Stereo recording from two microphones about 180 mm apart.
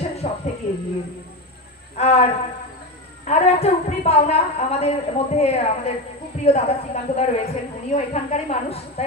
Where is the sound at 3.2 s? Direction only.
35° left (ahead or behind).